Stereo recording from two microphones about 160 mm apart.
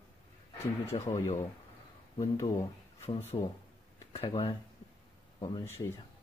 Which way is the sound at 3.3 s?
25° left (ahead or behind).